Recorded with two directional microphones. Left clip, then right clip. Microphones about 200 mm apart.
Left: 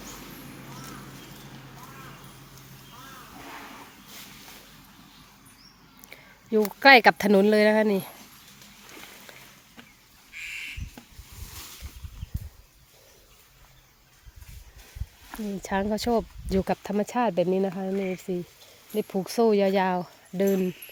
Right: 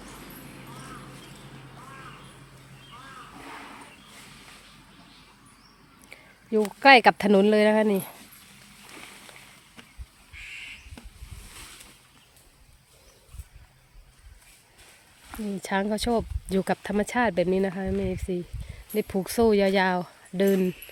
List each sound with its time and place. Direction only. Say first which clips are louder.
6.1 s speech: left 1 dB; centre (ahead or behind)
10.3 s a sound: left 4 dB; 50° left (ahead or behind)
15.3 s speech: right 1 dB; 5° right (ahead or behind)